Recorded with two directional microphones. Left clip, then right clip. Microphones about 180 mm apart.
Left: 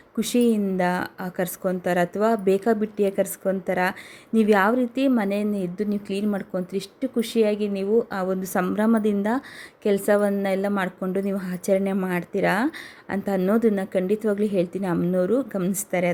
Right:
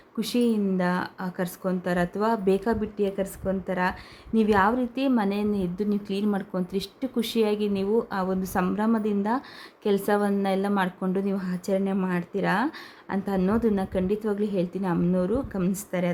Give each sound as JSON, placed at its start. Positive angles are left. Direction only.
{"t": 0.2, "sound": "a woman's voice", "side_deg": 15}